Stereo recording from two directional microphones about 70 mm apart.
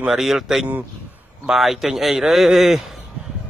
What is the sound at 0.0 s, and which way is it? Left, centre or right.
Speech, centre.